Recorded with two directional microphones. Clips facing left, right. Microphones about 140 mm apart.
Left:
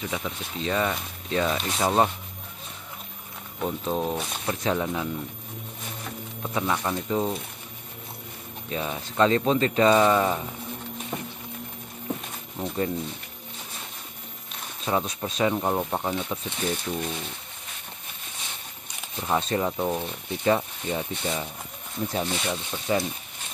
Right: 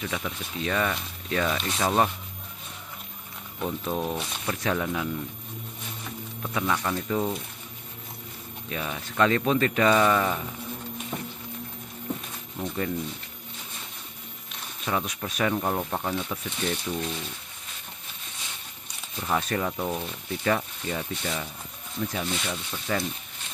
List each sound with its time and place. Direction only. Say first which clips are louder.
0.1 s speech: left 1 dB; 15° left (ahead or behind)
3.8 s speech: left 3 dB; 25° left (ahead or behind)
6.4 s speech: left 1 dB; 15° left (ahead or behind)
8.6 s speech: left 3 dB; 25° left (ahead or behind)
12.6 s speech: left 2 dB; 30° left (ahead or behind)
14.9 s speech: left 3 dB; 25° left (ahead or behind)
15.5 s speech: left 2 dB; 15° left (ahead or behind)
19.1 s speech: left 2 dB; 20° left (ahead or behind)
22.0 s speech: left 2 dB; 30° left (ahead or behind)